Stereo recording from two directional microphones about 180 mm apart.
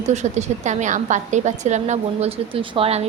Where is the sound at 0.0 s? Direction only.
40° right (ahead or behind).